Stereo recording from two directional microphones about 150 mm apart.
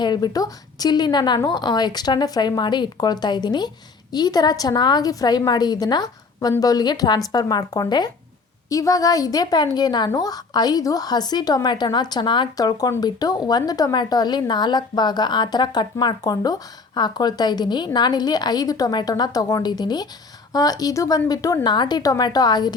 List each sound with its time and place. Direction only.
0.0 s a woman's voice: 30° left (ahead or behind)